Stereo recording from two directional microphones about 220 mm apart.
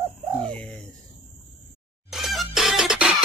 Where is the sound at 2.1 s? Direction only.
Centre (ahead or behind).